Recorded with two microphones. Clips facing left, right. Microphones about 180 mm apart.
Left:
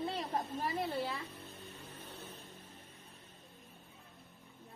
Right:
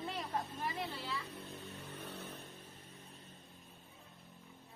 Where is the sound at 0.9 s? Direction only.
55° left (ahead or behind).